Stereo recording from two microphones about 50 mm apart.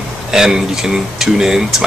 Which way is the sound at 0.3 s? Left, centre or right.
Centre.